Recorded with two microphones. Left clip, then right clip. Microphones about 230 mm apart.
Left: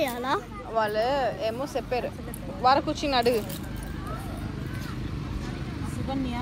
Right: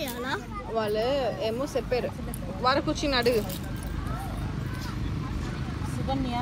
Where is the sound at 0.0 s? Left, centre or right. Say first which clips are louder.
Left 5 dB; left.